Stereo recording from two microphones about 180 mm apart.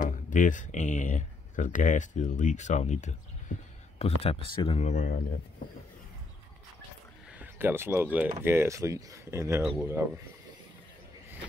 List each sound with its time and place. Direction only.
0.0 s speech: 45° left (ahead or behind)
7.2 s speech: 10° right (ahead or behind)
9.6 s speech: centre (ahead or behind)
9.8 s speech: 15° right (ahead or behind)